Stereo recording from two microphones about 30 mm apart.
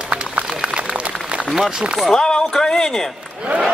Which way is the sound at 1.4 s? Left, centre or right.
Centre.